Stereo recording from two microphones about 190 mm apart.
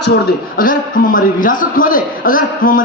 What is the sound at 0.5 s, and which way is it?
A man's voice, 45° left (ahead or behind).